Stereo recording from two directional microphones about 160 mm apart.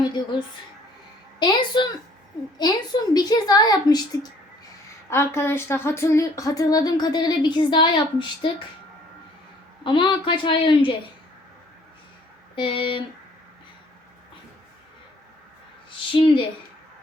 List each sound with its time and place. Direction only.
0.0 s a woman's voice: 30° left (ahead or behind)
9.8 s a woman's voice: 30° left (ahead or behind)
12.5 s a woman's voice: 30° left (ahead or behind)
16.1 s a woman's voice: 30° left (ahead or behind)